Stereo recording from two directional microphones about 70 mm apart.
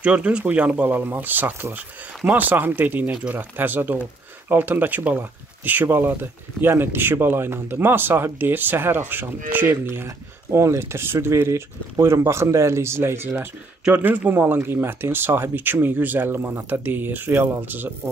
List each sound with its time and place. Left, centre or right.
0.0 s speech: centre
9.8 s speech: right
13.9 s speech: right